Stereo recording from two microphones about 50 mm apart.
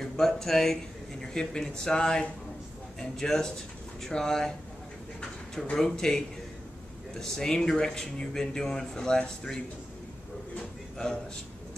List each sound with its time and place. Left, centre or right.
0.0 s speech: centre
5.8 s speech: centre